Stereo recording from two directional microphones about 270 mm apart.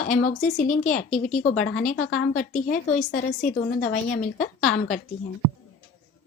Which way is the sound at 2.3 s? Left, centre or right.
Left.